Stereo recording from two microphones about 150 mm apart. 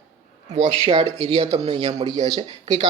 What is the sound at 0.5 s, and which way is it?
Speech, 40° right (ahead or behind).